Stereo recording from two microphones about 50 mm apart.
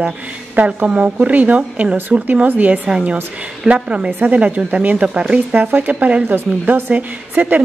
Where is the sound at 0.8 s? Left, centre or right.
Right.